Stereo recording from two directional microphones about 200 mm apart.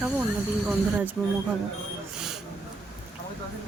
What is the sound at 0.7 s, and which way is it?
Speech, 10° right (ahead or behind).